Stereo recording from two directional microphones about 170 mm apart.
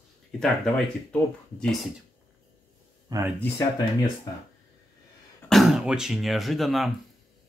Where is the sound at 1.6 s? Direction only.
Centre (ahead or behind).